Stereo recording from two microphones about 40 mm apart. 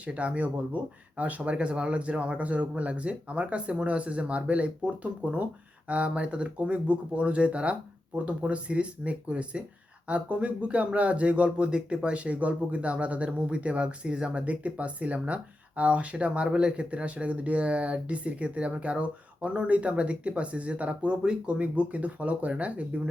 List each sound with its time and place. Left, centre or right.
0.0 s speech: right